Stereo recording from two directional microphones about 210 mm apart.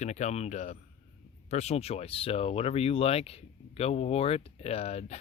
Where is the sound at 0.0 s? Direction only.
35° left (ahead or behind).